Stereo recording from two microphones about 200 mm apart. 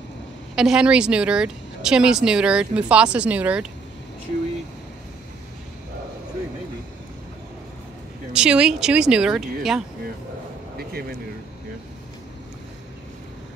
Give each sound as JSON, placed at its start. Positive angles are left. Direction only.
{"t": 0.6, "sound": "speech", "side_deg": -5}
{"t": 8.3, "sound": "speech", "side_deg": -5}
{"t": 10.8, "sound": "speech", "side_deg": -50}